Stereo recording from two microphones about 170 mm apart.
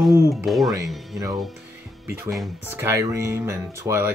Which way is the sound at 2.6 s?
15° right (ahead or behind).